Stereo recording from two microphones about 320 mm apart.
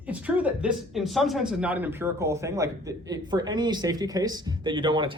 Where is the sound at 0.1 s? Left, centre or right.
Centre.